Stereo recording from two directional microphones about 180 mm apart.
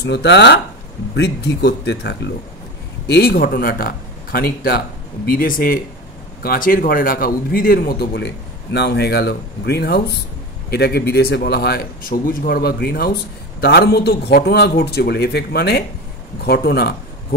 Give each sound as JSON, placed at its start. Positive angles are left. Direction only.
{"t": 0.0, "sound": "speech", "side_deg": 75}
{"t": 3.1, "sound": "a man's voice", "side_deg": 60}